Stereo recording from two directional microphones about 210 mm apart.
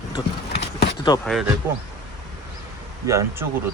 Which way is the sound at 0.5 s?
55° left (ahead or behind).